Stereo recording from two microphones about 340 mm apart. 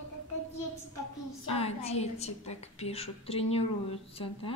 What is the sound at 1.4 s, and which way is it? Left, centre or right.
A woman's voice, centre.